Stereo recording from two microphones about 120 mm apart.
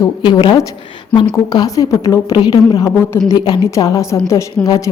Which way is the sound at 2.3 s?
35° left (ahead or behind).